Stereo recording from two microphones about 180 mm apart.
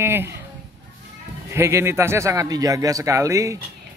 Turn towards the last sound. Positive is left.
turn(degrees=-15)  # may be behind; listen again after turning